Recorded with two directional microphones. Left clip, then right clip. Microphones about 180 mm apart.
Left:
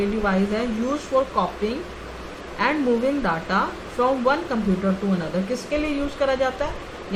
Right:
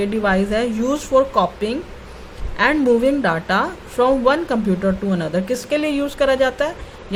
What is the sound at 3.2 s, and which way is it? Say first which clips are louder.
Speech: right 4 dB; 55° right (ahead or behind).